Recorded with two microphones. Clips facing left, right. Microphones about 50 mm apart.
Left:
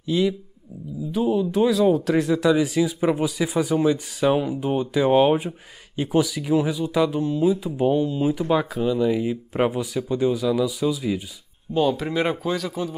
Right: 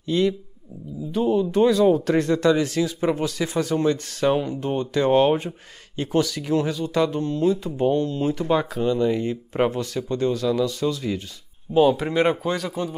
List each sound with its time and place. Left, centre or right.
0.0 s speech: centre
11.7 s speech: centre